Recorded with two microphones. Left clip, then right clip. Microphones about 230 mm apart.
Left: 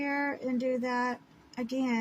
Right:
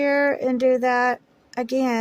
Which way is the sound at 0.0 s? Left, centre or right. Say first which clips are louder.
Right 12 dB; right.